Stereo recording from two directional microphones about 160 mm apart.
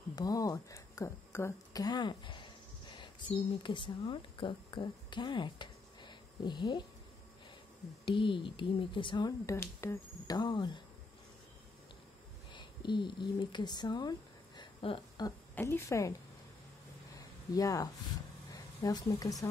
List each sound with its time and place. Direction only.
0.1 s speech: 25° left (ahead or behind)
8.0 s speech: 30° left (ahead or behind)
9.5 s speech: 15° left (ahead or behind)
12.5 s speech: 30° left (ahead or behind)
14.6 s a sound: 30° left (ahead or behind)
15.5 s a woman's voice: 15° left (ahead or behind)
17.6 s a woman's voice: 20° left (ahead or behind)